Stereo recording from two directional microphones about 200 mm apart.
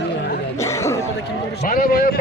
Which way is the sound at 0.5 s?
15° left (ahead or behind).